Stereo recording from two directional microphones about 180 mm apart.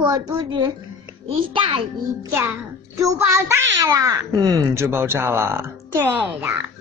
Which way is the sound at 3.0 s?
15° right (ahead or behind).